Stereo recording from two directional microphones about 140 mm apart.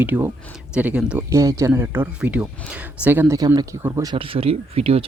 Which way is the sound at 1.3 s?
25° right (ahead or behind).